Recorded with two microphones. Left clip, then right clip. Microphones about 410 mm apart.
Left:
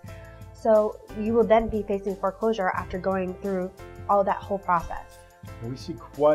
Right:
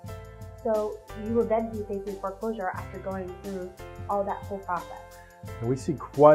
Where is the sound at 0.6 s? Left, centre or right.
Left.